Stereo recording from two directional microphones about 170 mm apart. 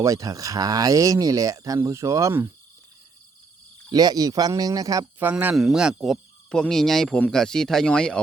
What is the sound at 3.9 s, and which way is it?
Speech, 20° right (ahead or behind).